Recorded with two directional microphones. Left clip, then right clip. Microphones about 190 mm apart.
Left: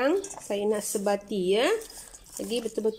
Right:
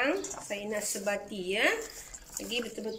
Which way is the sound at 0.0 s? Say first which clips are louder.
Left 4 dB; 50° left (ahead or behind).